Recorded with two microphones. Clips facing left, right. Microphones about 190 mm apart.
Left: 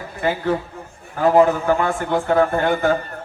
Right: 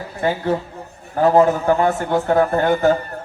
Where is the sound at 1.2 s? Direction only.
40° right (ahead or behind).